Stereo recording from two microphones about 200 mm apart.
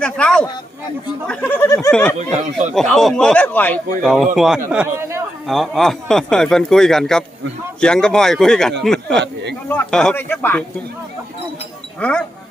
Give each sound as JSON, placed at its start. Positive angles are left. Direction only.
{"t": 0.0, "sound": "a sound", "side_deg": 5}
{"t": 1.3, "sound": "speech", "side_deg": 10}
{"t": 2.1, "sound": "speech", "side_deg": -35}
{"t": 2.7, "sound": "speech", "side_deg": 0}
{"t": 5.5, "sound": "speech", "side_deg": 0}
{"t": 9.2, "sound": "a sound", "side_deg": -60}
{"t": 9.6, "sound": "speech", "side_deg": 5}
{"t": 11.9, "sound": "speech", "side_deg": 5}